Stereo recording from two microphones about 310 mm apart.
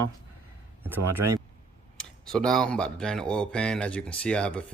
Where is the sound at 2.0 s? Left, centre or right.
Centre.